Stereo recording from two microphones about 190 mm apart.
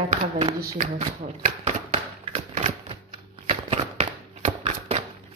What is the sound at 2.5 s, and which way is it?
Typewriter, 30° right (ahead or behind).